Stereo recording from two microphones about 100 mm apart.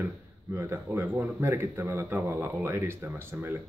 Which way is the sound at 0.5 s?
25° right (ahead or behind).